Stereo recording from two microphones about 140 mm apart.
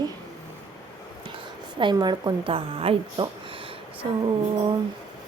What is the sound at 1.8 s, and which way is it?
A woman's voice, 30° right (ahead or behind).